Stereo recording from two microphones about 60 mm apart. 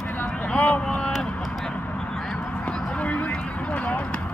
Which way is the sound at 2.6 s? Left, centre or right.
Left.